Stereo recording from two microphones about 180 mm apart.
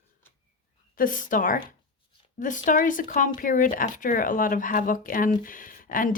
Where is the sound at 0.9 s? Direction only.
50° left (ahead or behind).